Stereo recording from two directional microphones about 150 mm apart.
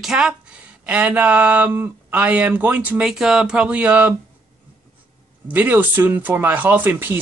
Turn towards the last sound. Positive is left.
turn(degrees=-15)  # may be behind; listen again after turning